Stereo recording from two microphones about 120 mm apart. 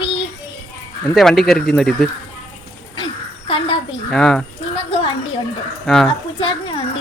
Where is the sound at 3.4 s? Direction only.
50° left (ahead or behind).